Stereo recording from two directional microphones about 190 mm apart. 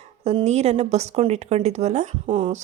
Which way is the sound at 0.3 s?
35° right (ahead or behind).